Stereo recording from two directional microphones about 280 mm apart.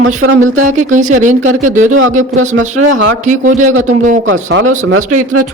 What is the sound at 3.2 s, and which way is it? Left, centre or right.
Speech, right.